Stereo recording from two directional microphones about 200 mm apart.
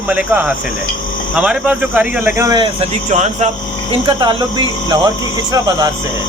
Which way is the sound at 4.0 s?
25° right (ahead or behind).